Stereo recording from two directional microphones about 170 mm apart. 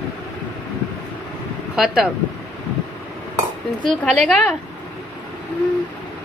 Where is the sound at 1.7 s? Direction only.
5° right (ahead or behind).